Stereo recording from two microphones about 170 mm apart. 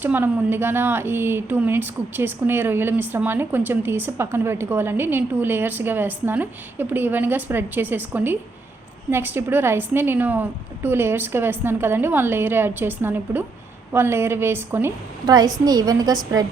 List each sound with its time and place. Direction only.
0.0 s a woman's voice: 10° right (ahead or behind)